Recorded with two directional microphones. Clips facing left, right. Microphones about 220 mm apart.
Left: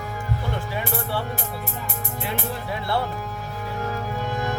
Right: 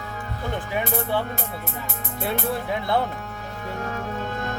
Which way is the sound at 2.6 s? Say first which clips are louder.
Right 1 dB; 20° right (ahead or behind).